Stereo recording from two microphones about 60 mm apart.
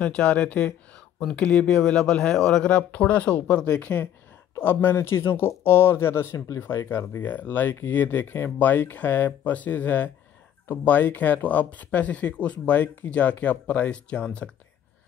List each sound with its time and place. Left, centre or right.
0.0 s speech: centre
4.6 s speech: left
6.3 s speech: left; by 14.5 s centre